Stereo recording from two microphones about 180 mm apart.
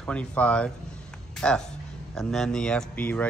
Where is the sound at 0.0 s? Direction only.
5° left (ahead or behind).